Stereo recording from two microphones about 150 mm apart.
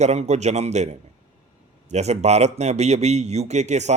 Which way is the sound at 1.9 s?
45° right (ahead or behind).